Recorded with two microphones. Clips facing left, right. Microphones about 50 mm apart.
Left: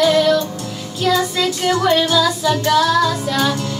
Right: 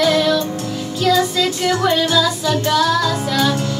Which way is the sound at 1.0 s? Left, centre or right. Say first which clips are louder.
Right 1 dB; left.